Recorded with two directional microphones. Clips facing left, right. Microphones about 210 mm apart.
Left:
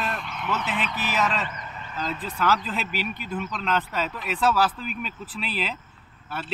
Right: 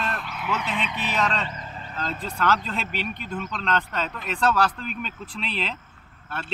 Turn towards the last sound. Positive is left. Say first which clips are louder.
# left 1 dB
turn(degrees=0)  # may be behind; listen again after turning